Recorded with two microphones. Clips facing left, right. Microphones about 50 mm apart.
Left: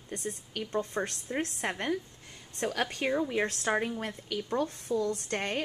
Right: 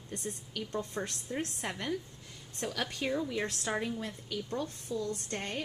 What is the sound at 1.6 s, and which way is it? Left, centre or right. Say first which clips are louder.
A woman's voice: left 4 dB; left.